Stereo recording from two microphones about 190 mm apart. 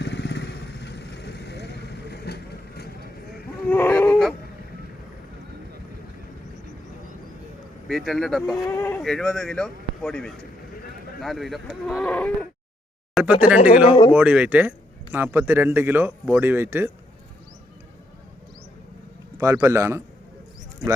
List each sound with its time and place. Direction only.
0.0 s vehicle: 65° left (ahead or behind)
3.7 s a sound: 10° left (ahead or behind)
7.9 s speech: centre (ahead or behind)
8.6 s livestock: 15° left (ahead or behind)
9.0 s speech: centre (ahead or behind)
11.9 s livestock: 5° left (ahead or behind)
13.2 s speech: centre (ahead or behind)
13.8 s speech: 25° left (ahead or behind)
14.1 s speech: 5° right (ahead or behind)
19.4 s speech: 15° right (ahead or behind)